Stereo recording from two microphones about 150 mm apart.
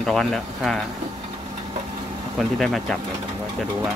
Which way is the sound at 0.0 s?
5° left (ahead or behind).